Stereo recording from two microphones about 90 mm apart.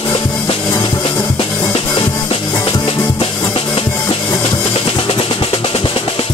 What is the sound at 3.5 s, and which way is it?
Music, 85° left.